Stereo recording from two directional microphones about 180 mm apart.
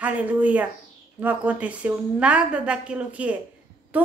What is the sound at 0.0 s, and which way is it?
A woman's voice, 10° right (ahead or behind).